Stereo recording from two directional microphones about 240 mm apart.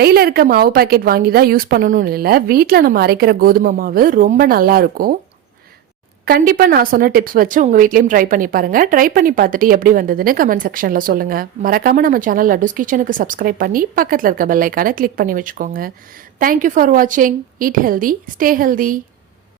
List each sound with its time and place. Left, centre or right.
0.0 s a woman's voice: right
6.2 s a woman's voice: right